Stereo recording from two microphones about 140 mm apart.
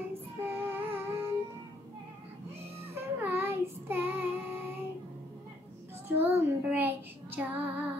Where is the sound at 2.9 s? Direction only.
15° right (ahead or behind).